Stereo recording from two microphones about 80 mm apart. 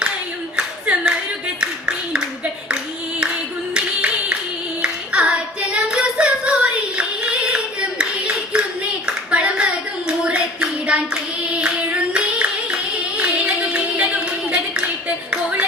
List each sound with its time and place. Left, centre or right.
0.5 s clapping: centre
1.6 s a sound: centre
3.8 s clapping: centre
4.8 s singing: centre
9.0 s hands: centre
15.3 s music: centre